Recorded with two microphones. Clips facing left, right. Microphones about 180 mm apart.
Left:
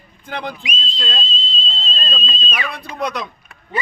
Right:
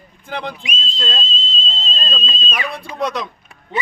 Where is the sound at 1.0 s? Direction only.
45° right (ahead or behind).